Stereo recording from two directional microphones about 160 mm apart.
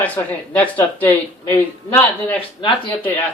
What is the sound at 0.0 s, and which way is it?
Speech, 10° left (ahead or behind).